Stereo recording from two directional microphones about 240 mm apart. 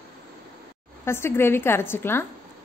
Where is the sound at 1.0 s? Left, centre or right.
Centre.